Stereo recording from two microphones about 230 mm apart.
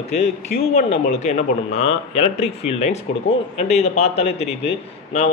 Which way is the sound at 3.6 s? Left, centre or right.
Left.